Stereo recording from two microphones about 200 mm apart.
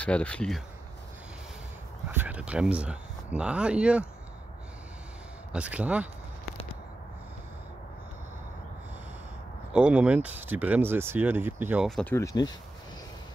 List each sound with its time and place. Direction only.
0.0 s speech: 5° left (ahead or behind)
2.1 s speech: 5° right (ahead or behind)
5.5 s speech: 5° right (ahead or behind)
9.7 s speech: 5° right (ahead or behind)
12.0 s speech: 10° left (ahead or behind)